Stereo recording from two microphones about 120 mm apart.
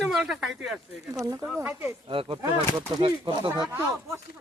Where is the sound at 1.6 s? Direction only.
15° right (ahead or behind).